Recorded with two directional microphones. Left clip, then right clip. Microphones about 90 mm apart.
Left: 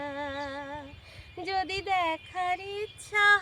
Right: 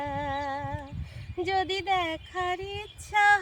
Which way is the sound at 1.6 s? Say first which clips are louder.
Even; 25° left (ahead or behind).